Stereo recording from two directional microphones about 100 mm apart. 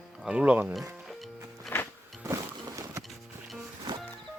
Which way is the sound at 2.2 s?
30° right (ahead or behind).